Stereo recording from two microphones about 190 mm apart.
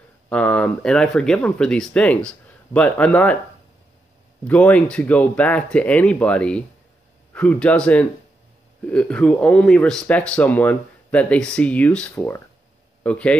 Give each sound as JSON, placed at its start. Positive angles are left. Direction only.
{"t": 0.3, "sound": "speech", "side_deg": 5}
{"t": 4.5, "sound": "speech", "side_deg": 5}